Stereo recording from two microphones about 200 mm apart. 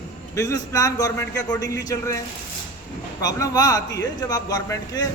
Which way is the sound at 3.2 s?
20° left (ahead or behind).